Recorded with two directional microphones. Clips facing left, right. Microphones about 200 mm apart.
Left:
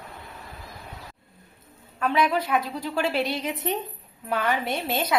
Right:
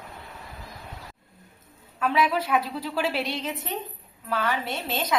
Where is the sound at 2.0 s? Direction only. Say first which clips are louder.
Left 1 dB; 5° right (ahead or behind).